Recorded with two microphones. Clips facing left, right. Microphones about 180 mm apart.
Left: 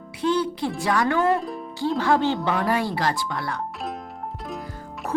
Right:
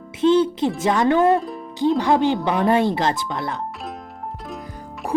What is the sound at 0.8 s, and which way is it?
Speech, 20° right (ahead or behind).